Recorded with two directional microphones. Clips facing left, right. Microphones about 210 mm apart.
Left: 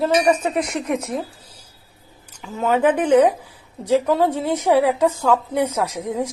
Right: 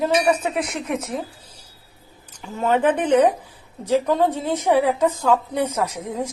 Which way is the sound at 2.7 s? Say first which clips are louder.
Left 2 dB; 10° left (ahead or behind).